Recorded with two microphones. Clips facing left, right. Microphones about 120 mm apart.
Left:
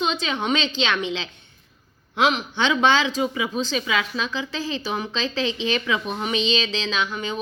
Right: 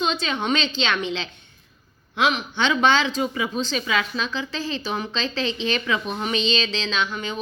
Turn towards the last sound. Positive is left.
turn(degrees=15)  # may be behind; listen again after turning